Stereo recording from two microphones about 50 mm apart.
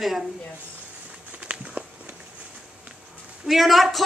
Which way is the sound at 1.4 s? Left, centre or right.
Right.